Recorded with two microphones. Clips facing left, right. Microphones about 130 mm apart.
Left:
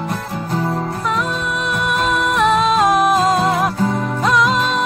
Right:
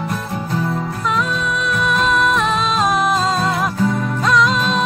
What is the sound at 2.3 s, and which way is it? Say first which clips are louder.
Music: left 4 dB; 15° left (ahead or behind).